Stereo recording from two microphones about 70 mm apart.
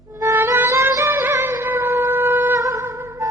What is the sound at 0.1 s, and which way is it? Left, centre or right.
Music, right.